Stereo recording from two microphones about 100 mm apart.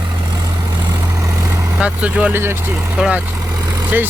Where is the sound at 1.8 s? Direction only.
15° right (ahead or behind).